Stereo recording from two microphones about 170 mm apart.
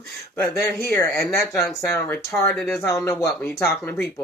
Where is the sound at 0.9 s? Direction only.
15° left (ahead or behind).